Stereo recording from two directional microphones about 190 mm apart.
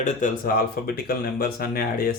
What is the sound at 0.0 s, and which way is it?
Speech, 45° left (ahead or behind).